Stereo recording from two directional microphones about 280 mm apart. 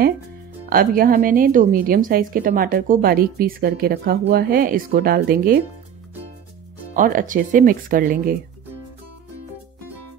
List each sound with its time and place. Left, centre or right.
0.7 s a woman's voice: right
6.9 s speech: right